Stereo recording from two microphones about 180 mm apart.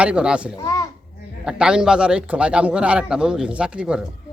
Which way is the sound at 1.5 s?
5° right (ahead or behind).